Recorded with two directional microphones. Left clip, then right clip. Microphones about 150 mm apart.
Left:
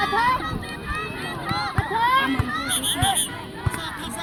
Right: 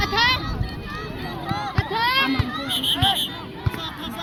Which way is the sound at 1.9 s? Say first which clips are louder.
Left 1 dB; 40° left (ahead or behind).